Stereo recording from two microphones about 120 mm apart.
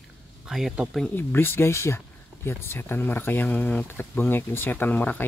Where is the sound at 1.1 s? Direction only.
20° left (ahead or behind).